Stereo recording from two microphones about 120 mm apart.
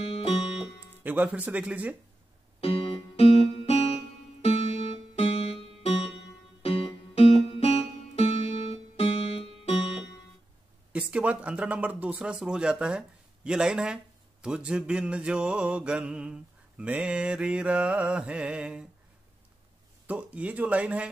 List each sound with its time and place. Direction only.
0.0 s music: 55° left (ahead or behind)
0.6 s music: 15° right (ahead or behind)
2.6 s music: 55° left (ahead or behind)
10.9 s mantra: 10° right (ahead or behind)
20.1 s mantra: 10° right (ahead or behind)